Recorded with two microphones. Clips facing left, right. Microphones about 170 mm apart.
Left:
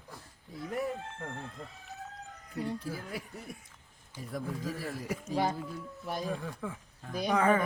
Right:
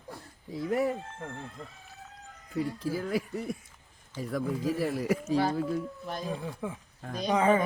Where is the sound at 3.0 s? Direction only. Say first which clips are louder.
Right 10 dB; 90° right.